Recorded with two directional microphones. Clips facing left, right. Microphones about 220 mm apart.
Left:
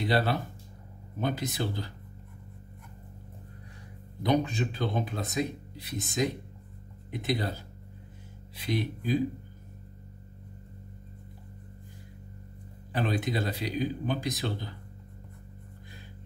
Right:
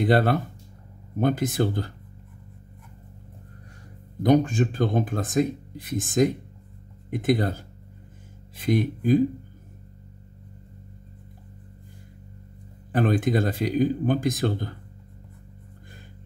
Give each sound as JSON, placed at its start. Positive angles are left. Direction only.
{"t": 0.0, "sound": "speech", "side_deg": -50}
{"t": 4.2, "sound": "speech", "side_deg": -45}
{"t": 12.9, "sound": "speech", "side_deg": -50}